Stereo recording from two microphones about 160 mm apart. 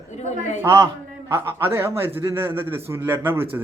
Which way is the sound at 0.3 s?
50° left (ahead or behind).